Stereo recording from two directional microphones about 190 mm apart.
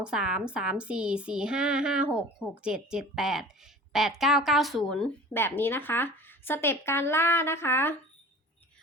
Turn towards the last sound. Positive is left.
turn(degrees=10)  # may be behind; listen again after turning